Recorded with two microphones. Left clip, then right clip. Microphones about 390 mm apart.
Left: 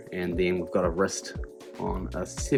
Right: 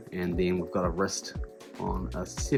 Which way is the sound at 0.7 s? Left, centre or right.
Left.